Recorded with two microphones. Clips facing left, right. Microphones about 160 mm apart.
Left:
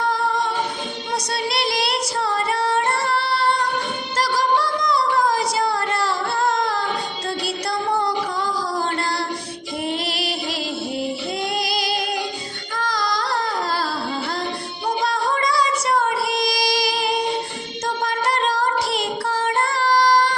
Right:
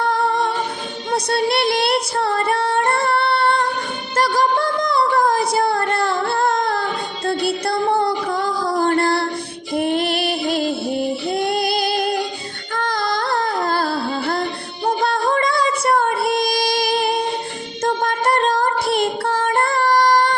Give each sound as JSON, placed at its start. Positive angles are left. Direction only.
{"t": 0.1, "sound": "a capella", "side_deg": -60}
{"t": 1.1, "sound": "female singing", "side_deg": -55}
{"t": 4.2, "sound": "a sound", "side_deg": -55}
{"t": 7.3, "sound": "music", "side_deg": -55}
{"t": 15.0, "sound": "child singing", "side_deg": -55}